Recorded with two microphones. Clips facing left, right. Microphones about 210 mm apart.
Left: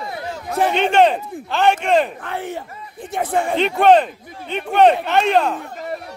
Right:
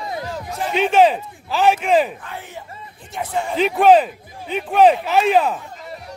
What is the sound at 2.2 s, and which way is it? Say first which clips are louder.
A man's voice: left 7 dB; 60° left (ahead or behind).